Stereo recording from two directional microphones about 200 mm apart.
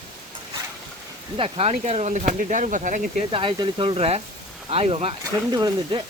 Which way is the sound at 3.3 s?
25° right (ahead or behind).